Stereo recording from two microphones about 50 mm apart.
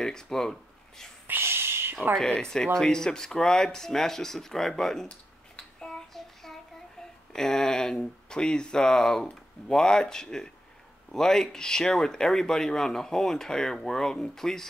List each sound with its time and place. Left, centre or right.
0.0 s speech: centre
1.2 s a sound: right
2.1 s speech: centre
5.8 s child singing: centre
7.3 s speech: centre